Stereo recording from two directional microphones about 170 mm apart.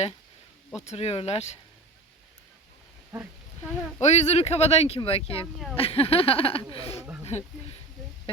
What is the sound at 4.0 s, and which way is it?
Speech, 40° left (ahead or behind).